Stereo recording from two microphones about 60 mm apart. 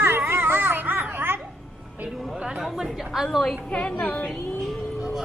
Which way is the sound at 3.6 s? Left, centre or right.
Centre.